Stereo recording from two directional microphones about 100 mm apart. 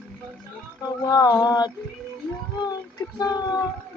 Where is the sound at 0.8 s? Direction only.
40° left (ahead or behind).